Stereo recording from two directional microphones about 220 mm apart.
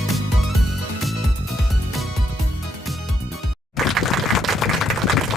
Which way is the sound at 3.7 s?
Centre (ahead or behind).